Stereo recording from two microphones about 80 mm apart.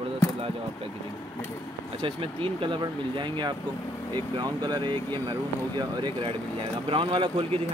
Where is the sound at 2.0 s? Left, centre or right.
Right.